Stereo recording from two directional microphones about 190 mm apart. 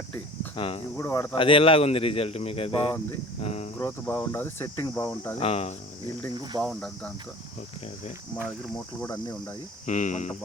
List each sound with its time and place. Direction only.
0.5 s speech: 30° left (ahead or behind)
0.9 s cricket: 15° left (ahead or behind)
1.4 s speech: 30° left (ahead or behind)
3.8 s cricket: 10° left (ahead or behind)
5.4 s speech: 30° left (ahead or behind)
6.3 s speech: 25° right (ahead or behind)
6.6 s speech: centre (ahead or behind)
9.0 s cricket: 15° left (ahead or behind)
9.8 s speech: 40° left (ahead or behind)